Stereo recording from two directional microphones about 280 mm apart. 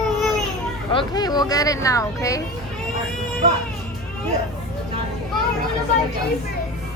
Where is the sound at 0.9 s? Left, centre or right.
Centre.